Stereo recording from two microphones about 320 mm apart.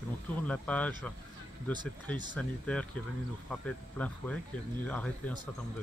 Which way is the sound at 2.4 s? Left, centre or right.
Centre.